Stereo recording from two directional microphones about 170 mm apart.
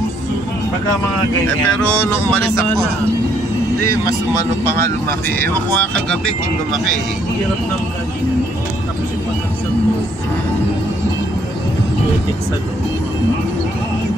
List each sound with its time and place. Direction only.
1.9 s speech: 15° left (ahead or behind)
3.8 s speech: 15° left (ahead or behind)